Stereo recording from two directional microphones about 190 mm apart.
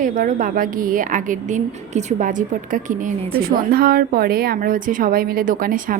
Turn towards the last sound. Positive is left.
turn(degrees=-45)  # may be behind; listen again after turning